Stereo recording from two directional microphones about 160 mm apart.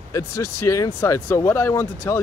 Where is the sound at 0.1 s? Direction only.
20° left (ahead or behind).